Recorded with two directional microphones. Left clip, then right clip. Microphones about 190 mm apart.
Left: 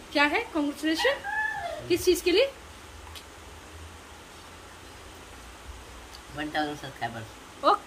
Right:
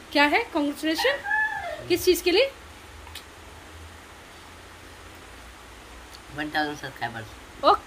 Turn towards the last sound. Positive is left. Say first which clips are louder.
# right 3 dB
turn(degrees=-25)  # may be behind; listen again after turning